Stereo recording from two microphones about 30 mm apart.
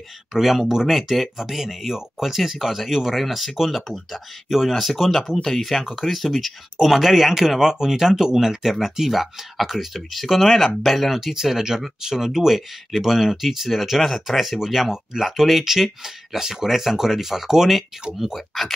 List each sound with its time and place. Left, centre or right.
0.3 s speech: centre
3.2 s speech: centre
11.1 s speech: centre